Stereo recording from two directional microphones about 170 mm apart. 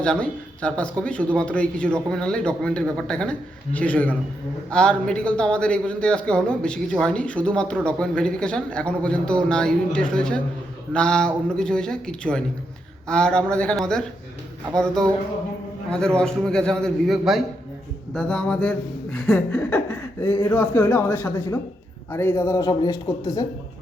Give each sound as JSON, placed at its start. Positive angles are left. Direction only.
{"t": 0.0, "sound": "a man's voice", "side_deg": 5}